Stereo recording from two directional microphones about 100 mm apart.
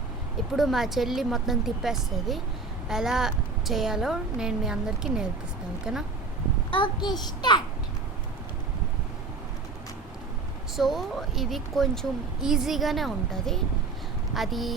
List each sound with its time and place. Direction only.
0.5 s a woman's voice: centre (ahead or behind)
6.7 s a child's voice: 55° left (ahead or behind)
10.8 s a woman's voice: centre (ahead or behind)